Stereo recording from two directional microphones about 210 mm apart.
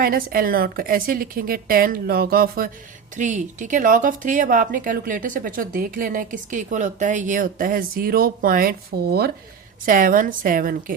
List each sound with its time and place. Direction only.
0.0 s a woman's voice: 45° right (ahead or behind)